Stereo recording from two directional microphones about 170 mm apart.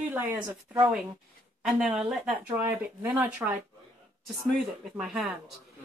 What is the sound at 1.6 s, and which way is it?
Speech, 5° right (ahead or behind).